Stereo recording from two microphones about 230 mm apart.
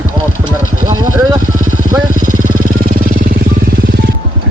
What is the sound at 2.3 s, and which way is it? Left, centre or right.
Vehicle, right.